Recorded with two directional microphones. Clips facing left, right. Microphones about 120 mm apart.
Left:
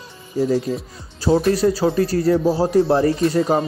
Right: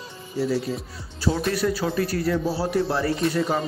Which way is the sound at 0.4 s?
45° left (ahead or behind).